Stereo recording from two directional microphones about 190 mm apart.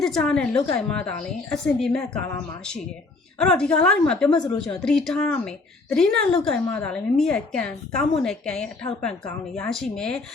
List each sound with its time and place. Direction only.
0.0 s a woman's voice: 5° left (ahead or behind)
4.3 s a woman's voice: 25° left (ahead or behind)
4.8 s a woman's voice: 5° left (ahead or behind)